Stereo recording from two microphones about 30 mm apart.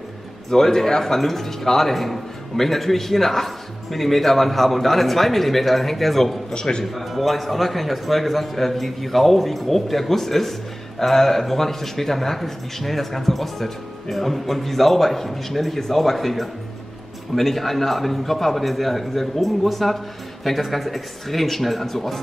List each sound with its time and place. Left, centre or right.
0.5 s speech: centre
6.5 s a man's voice: left
6.8 s a man's voice: centre